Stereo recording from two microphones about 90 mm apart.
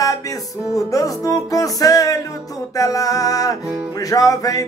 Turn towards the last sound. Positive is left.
turn(degrees=40)  # may be behind; listen again after turning